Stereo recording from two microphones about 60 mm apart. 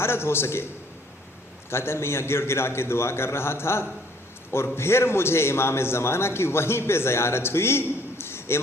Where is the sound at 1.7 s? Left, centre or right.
Left.